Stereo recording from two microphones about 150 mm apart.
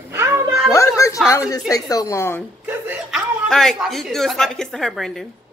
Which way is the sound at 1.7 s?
20° left (ahead or behind).